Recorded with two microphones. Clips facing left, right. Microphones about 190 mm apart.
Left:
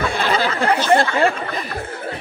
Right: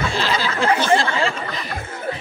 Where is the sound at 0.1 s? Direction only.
55° left (ahead or behind).